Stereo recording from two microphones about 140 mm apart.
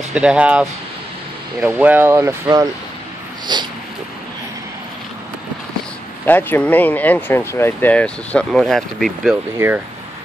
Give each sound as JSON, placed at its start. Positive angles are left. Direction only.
{"t": 0.1, "sound": "speech", "side_deg": -10}
{"t": 3.5, "sound": "a sound", "side_deg": -30}
{"t": 6.2, "sound": "speech", "side_deg": 15}